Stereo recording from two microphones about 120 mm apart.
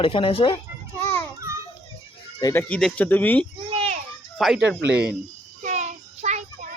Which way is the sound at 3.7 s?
55° right (ahead or behind).